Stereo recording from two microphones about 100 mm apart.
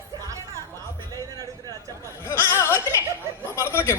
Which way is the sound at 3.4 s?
25° left (ahead or behind).